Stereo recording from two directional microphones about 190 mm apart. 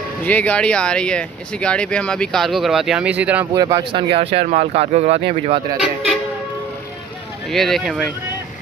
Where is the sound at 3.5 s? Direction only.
20° right (ahead or behind).